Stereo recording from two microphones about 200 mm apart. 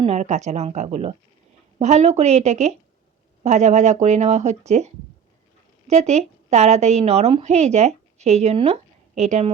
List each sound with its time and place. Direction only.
0.0 s speech: 35° right (ahead or behind)
5.9 s a woman's voice: 35° right (ahead or behind)